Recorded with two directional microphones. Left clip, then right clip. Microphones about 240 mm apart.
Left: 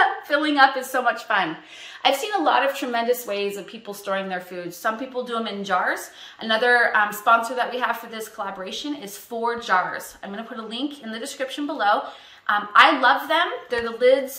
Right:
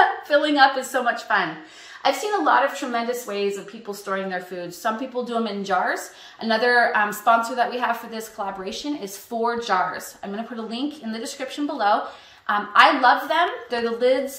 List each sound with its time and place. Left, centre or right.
0.3 s a woman's voice: centre
1.0 s a woman's voice: left
2.0 s a woman's voice: left
4.0 s a woman's voice: left
4.8 s a woman's voice: centre